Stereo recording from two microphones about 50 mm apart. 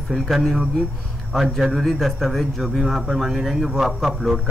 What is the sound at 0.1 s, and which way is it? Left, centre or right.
A man's voice, centre.